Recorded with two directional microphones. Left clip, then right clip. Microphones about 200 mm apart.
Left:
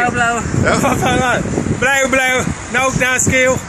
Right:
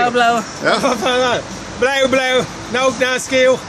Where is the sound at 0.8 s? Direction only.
Centre (ahead or behind).